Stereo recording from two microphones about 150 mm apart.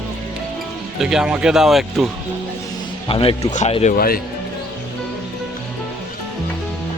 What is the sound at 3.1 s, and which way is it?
Speech, 40° left (ahead or behind).